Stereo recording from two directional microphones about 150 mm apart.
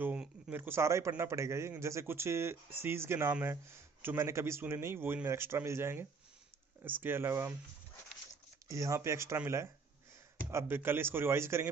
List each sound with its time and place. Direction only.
0.0 s a man's voice: 10° right (ahead or behind)
8.6 s a man's voice: 20° right (ahead or behind)